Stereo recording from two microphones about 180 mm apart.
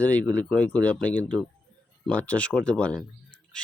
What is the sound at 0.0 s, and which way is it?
Speech, 10° left (ahead or behind).